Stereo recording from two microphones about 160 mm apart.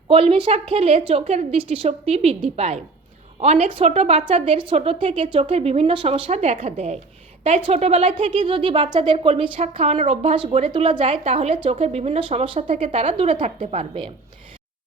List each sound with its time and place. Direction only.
0.1 s speech: 35° right (ahead or behind)